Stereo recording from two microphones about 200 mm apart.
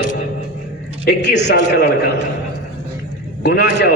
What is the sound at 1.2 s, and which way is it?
Speech, 60° left (ahead or behind).